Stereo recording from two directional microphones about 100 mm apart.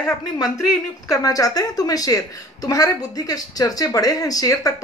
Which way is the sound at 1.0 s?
35° left (ahead or behind).